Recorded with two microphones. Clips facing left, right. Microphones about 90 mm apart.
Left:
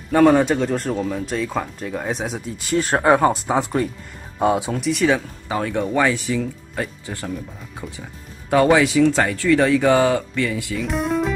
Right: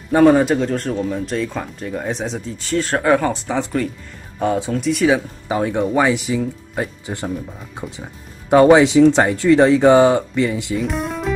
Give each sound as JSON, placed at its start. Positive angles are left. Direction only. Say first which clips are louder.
{"t": 0.1, "sound": "speech", "louder": "right 2 dB", "side_deg": -10}
{"t": 4.8, "sound": "speech", "louder": "right 3 dB", "side_deg": 0}
{"t": 5.5, "sound": "speech", "louder": "right 3 dB", "side_deg": -15}
{"t": 10.8, "sound": "music", "louder": "left 1 dB", "side_deg": 0}